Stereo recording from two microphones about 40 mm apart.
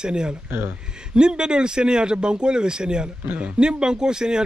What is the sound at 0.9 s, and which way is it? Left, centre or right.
Speech, right.